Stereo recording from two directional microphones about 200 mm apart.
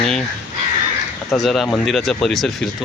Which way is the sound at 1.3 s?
Centre (ahead or behind).